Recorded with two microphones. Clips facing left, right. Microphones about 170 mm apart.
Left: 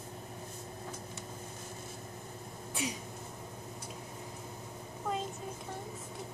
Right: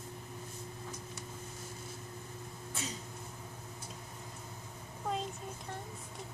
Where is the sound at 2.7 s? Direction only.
15° left (ahead or behind).